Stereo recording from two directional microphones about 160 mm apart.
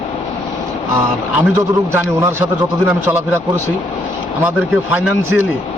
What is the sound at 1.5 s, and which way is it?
Speech, 15° right (ahead or behind).